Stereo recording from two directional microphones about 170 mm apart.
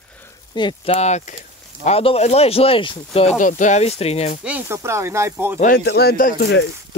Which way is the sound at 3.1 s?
45° left (ahead or behind).